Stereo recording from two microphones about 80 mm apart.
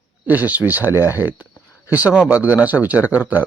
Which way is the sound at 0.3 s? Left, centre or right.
Right.